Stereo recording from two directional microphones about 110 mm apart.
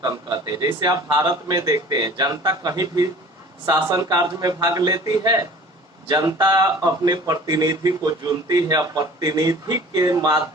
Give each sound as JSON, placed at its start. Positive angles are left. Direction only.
{"t": 0.0, "sound": "speech", "side_deg": -35}